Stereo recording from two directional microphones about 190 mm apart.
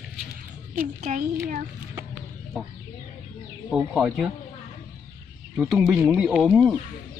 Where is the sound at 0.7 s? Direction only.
40° right (ahead or behind).